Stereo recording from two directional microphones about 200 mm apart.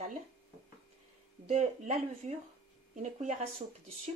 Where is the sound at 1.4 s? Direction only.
35° right (ahead or behind).